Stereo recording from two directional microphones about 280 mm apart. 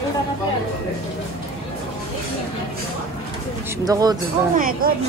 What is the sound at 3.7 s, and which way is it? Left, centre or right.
Speech, centre.